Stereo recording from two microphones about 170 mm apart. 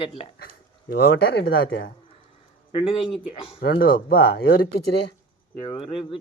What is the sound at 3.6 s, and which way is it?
Speech, 65° left (ahead or behind).